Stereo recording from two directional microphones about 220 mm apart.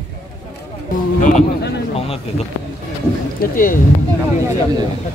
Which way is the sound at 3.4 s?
40° left (ahead or behind).